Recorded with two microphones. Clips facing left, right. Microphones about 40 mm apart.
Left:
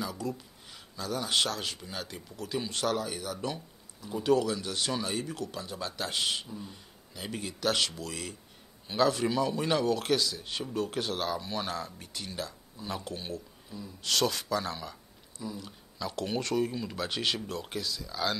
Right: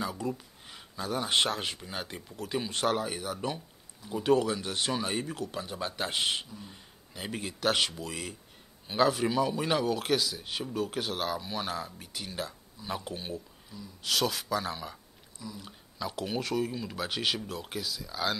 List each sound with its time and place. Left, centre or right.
0.0 s speech: centre
13.7 s speech: centre
14.0 s speech: centre